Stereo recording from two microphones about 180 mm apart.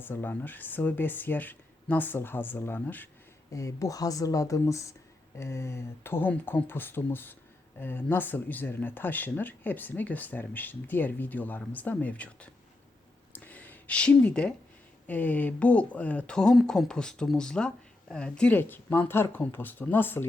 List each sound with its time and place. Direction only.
0.0 s speech: 10° left (ahead or behind)
13.3 s a sound: 10° left (ahead or behind)
15.0 s speech: 10° left (ahead or behind)